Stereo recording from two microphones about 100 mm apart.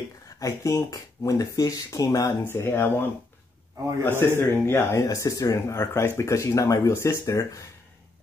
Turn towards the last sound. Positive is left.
turn(degrees=30)  # may be behind; listen again after turning